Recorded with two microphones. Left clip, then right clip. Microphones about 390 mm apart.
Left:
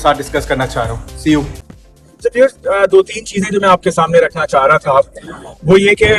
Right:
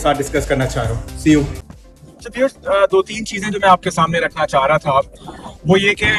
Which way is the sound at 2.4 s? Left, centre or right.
Right.